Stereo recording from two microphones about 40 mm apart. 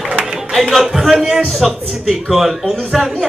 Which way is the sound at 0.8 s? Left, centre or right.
Centre.